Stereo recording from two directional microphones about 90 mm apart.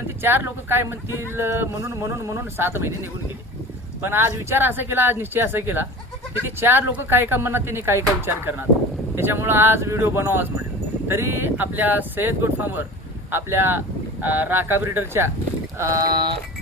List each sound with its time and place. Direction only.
0.2 s speech: 25° right (ahead or behind)
16.0 s sheep: 55° right (ahead or behind)